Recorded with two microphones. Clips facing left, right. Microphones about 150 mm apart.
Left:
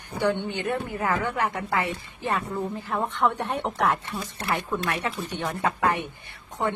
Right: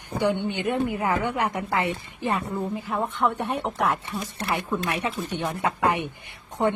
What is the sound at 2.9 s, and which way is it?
A woman's voice, 5° right (ahead or behind).